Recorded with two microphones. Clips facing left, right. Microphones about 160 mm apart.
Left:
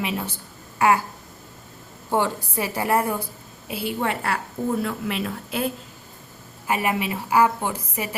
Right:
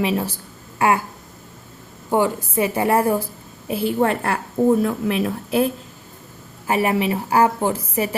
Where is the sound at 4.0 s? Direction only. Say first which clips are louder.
Right 5 dB; 45° right (ahead or behind).